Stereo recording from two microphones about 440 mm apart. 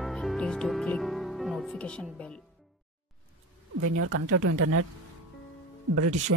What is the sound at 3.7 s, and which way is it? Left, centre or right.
Speech, right.